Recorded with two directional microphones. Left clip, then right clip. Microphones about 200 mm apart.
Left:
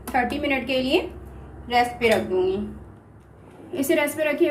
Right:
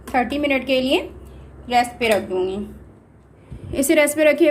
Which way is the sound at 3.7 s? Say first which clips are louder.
Right 6 dB; 50° right (ahead or behind).